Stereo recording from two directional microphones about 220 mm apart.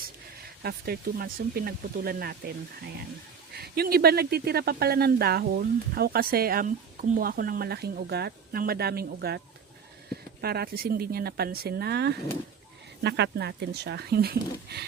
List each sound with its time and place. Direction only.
0.6 s speech: 45° right (ahead or behind)
10.4 s speech: 45° right (ahead or behind)